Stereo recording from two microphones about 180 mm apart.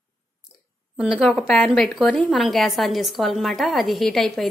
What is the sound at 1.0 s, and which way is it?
A woman's voice, 5° right (ahead or behind).